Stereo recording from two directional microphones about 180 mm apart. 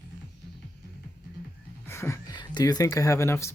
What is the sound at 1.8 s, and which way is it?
Speech, 15° left (ahead or behind).